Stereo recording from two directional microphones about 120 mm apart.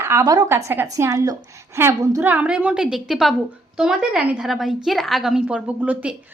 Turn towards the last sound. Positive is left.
turn(degrees=-10)  # may be behind; listen again after turning